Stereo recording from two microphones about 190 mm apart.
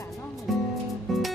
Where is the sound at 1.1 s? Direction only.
Centre (ahead or behind).